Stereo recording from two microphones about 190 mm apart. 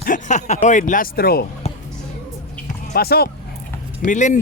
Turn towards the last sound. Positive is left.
turn(degrees=40)  # may be behind; listen again after turning